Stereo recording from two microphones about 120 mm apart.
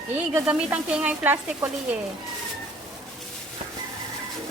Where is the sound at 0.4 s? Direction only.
10° right (ahead or behind).